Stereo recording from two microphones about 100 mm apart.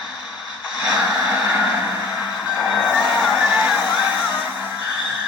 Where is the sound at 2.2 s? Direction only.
45° left (ahead or behind).